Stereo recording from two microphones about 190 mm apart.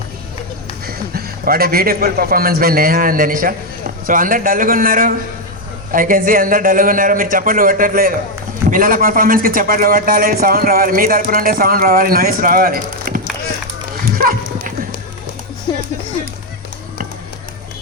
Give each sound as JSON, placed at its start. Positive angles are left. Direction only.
{"t": 0.9, "sound": "a man's voice", "side_deg": -50}
{"t": 14.2, "sound": "dog", "side_deg": -50}
{"t": 15.7, "sound": "music", "side_deg": 25}